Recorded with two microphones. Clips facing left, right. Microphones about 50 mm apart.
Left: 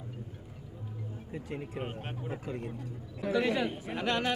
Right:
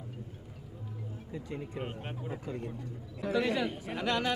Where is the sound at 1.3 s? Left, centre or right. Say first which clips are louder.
Left 1 dB; left.